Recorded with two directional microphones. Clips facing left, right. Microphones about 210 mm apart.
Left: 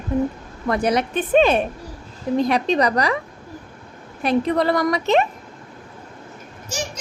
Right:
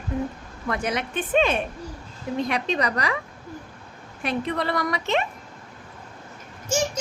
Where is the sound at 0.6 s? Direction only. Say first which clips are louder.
Left 7 dB; 35° left (ahead or behind).